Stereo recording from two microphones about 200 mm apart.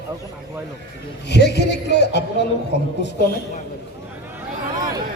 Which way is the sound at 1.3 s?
55° left (ahead or behind).